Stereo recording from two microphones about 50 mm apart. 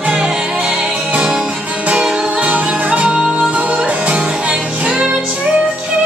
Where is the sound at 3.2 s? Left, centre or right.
Centre.